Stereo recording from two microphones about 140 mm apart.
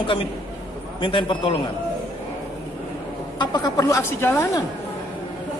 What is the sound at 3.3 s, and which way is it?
A woman's voice, 30° left (ahead or behind).